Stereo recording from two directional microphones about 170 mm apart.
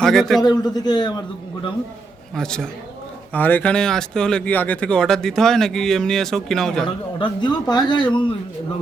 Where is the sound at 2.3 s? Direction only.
5° left (ahead or behind).